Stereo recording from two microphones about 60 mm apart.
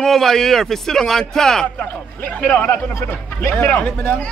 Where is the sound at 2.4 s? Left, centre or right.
Left.